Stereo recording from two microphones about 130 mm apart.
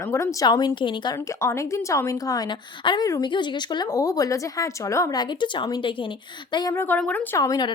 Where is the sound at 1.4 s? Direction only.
20° left (ahead or behind).